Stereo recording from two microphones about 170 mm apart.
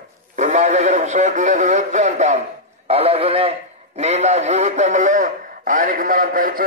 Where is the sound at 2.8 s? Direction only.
35° right (ahead or behind).